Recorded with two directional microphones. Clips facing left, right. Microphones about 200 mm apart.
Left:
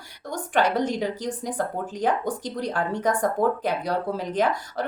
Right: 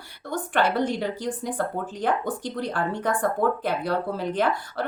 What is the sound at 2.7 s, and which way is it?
Speech, 10° left (ahead or behind).